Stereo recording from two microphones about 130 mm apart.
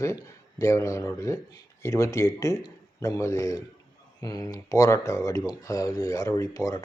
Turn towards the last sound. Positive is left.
turn(degrees=25)  # may be behind; listen again after turning